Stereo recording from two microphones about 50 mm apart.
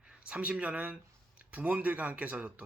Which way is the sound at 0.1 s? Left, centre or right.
Right.